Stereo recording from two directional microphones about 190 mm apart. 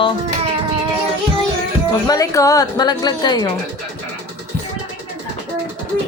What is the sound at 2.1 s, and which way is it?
A woman's voice, 20° left (ahead or behind).